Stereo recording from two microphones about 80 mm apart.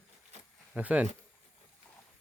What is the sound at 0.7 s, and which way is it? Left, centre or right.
Speech, centre.